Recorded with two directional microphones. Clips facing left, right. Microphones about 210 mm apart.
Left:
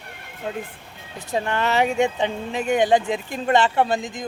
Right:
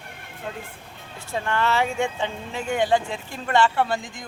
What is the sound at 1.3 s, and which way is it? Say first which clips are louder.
Speech: left 2 dB; 20° left (ahead or behind).